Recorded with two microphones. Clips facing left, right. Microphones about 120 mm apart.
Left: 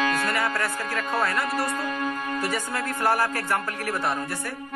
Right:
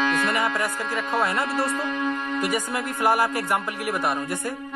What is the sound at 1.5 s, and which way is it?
Speech, centre (ahead or behind).